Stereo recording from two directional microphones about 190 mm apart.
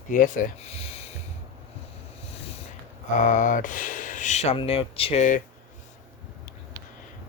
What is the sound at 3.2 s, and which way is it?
Speech, 45° left (ahead or behind).